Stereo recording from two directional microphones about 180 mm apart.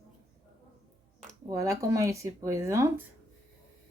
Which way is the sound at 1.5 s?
15° right (ahead or behind).